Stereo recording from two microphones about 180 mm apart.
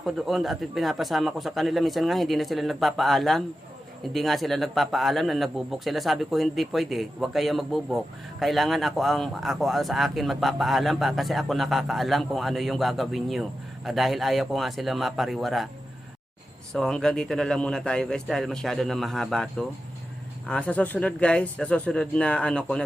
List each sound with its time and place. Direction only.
0.0 s speech: centre (ahead or behind)
16.7 s speech: 5° left (ahead or behind)